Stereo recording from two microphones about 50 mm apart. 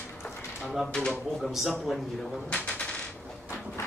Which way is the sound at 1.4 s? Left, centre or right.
Centre.